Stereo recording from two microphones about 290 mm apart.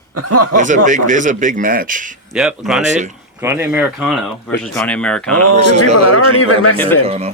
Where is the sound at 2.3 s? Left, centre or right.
Centre.